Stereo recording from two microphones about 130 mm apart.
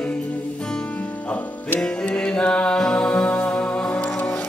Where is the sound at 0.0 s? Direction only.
10° left (ahead or behind).